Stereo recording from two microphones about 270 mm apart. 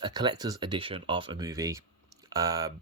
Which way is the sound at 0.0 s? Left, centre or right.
Centre.